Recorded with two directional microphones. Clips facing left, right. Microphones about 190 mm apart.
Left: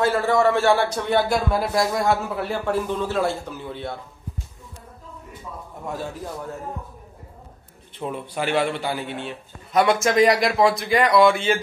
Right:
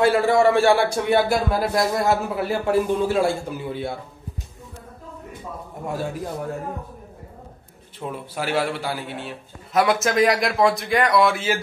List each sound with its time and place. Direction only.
0.0 s a man's voice: 15° right (ahead or behind)
8.0 s a man's voice: 5° right (ahead or behind)